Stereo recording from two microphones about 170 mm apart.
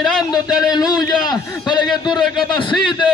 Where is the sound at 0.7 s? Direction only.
25° left (ahead or behind).